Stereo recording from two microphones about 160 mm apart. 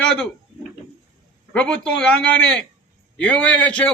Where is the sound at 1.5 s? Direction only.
5° left (ahead or behind).